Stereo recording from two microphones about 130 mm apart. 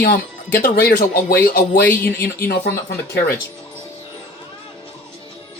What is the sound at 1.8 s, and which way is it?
Speech, 15° left (ahead or behind).